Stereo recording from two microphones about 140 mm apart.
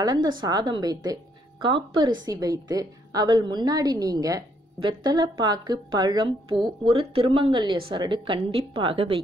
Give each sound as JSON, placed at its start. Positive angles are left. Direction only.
{"t": 0.0, "sound": "a woman's voice", "side_deg": -30}